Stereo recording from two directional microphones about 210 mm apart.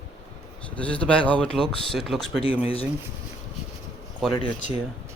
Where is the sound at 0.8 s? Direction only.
5° left (ahead or behind).